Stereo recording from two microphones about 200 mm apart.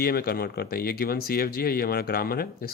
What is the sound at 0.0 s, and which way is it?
Speech, 50° left (ahead or behind).